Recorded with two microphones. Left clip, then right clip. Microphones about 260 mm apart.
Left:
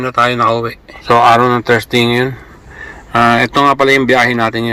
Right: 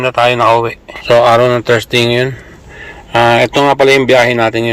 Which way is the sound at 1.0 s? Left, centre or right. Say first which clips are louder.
Right 1 dB; centre.